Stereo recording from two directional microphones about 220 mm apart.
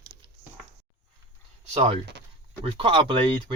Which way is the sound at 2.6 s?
25° right (ahead or behind).